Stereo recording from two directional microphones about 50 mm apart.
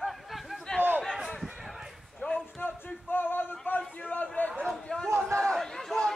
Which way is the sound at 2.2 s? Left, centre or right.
Left.